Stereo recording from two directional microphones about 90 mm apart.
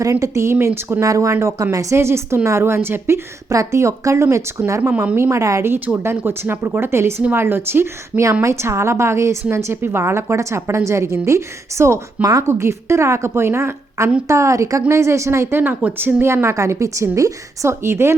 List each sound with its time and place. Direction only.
0.0 s a woman's voice: 35° right (ahead or behind)
4.8 s a woman's voice: 20° right (ahead or behind)